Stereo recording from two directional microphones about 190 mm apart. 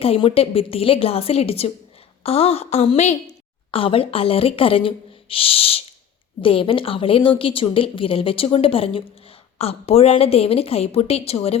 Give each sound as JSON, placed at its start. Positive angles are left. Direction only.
{"t": 0.0, "sound": "a woman's voice", "side_deg": 30}